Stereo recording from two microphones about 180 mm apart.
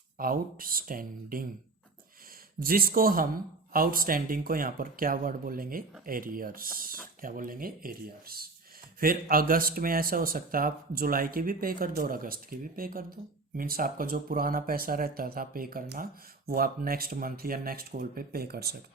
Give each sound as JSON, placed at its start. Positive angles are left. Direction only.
{"t": 0.2, "sound": "speech", "side_deg": -50}
{"t": 2.6, "sound": "speech", "side_deg": -55}